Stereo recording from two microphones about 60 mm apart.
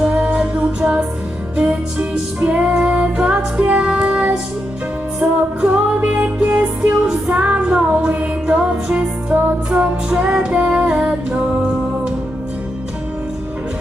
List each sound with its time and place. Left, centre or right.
0.1 s music: centre